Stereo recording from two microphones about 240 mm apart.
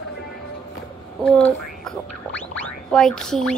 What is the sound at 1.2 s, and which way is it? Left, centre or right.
Speech, centre.